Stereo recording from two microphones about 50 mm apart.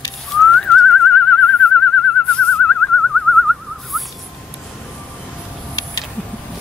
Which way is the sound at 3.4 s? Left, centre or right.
Centre.